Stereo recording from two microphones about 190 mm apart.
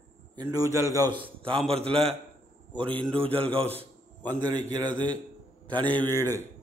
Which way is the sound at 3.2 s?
30° right (ahead or behind).